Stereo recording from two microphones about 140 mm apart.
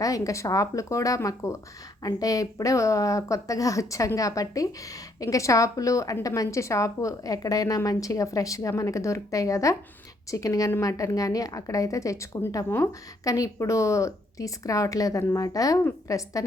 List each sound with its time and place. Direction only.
0.0 s a woman's voice: 25° left (ahead or behind)